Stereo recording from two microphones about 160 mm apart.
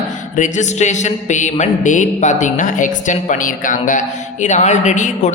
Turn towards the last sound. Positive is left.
turn(degrees=50)  # may be behind; listen again after turning